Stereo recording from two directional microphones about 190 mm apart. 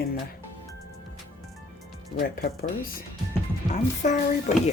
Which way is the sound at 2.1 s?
55° left (ahead or behind).